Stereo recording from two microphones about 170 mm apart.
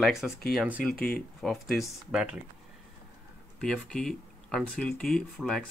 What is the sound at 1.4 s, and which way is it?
Speech, centre (ahead or behind).